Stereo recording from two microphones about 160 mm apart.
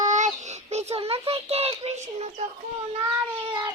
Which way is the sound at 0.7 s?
40° right (ahead or behind).